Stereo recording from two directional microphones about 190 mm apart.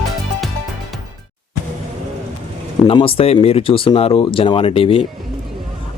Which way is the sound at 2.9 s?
30° left (ahead or behind).